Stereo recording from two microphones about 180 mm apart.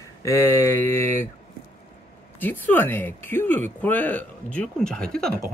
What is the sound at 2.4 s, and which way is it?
Speech, 10° left (ahead or behind).